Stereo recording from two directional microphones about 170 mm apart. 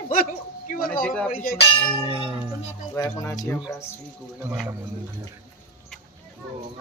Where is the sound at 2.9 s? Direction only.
20° left (ahead or behind).